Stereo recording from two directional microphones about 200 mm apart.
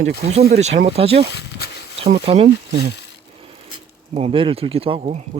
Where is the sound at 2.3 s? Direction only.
30° right (ahead or behind).